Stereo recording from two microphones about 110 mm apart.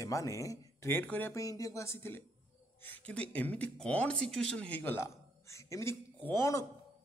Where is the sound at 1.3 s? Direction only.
30° left (ahead or behind).